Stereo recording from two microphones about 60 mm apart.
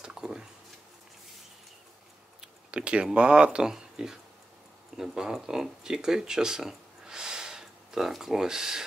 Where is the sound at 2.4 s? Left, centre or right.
Centre.